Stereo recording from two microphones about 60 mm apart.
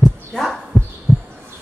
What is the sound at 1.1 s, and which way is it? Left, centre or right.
Music, right.